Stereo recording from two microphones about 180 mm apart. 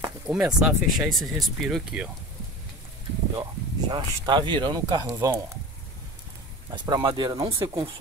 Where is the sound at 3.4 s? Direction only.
25° right (ahead or behind).